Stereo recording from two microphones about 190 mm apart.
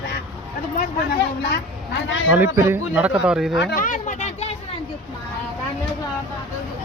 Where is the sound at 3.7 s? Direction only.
45° left (ahead or behind).